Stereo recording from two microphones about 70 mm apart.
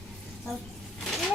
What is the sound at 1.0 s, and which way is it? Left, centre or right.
Vehicle, centre.